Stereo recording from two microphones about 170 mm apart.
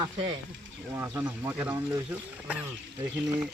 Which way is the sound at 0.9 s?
10° right (ahead or behind).